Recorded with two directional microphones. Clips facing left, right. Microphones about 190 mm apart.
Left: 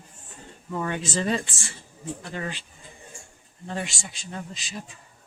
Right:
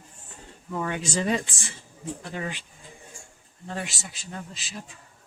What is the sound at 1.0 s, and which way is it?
Speech, 10° right (ahead or behind).